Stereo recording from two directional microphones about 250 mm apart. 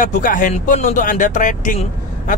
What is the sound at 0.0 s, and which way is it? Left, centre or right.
Speech, left.